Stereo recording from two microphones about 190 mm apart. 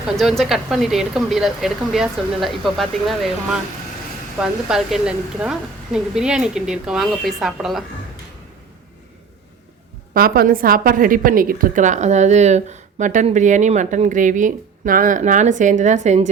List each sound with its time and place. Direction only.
0.2 s speech: centre (ahead or behind)
10.2 s a woman's voice: 50° right (ahead or behind)